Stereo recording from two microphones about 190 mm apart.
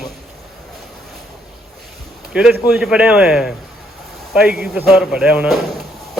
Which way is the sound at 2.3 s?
5° right (ahead or behind).